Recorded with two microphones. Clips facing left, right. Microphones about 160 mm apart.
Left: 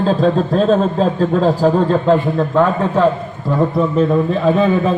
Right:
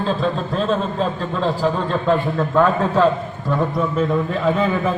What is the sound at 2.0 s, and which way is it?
A man's voice, 20° left (ahead or behind).